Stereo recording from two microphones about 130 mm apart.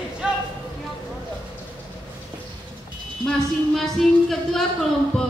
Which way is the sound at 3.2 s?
Centre (ahead or behind).